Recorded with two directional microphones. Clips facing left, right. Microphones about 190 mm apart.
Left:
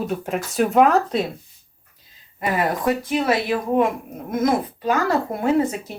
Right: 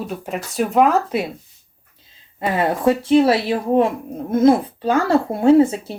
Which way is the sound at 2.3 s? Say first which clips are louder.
Right 2 dB; 25° right (ahead or behind).